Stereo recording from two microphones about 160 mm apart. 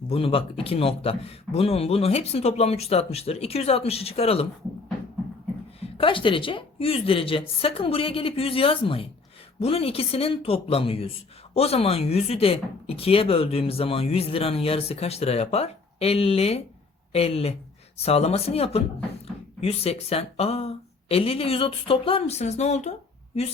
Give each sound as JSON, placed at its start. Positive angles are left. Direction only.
{"t": 0.1, "sound": "speech", "side_deg": 35}
{"t": 6.0, "sound": "speech", "side_deg": 30}